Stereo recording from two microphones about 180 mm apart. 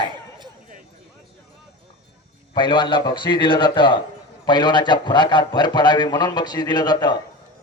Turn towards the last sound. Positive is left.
turn(degrees=25)  # may be behind; listen again after turning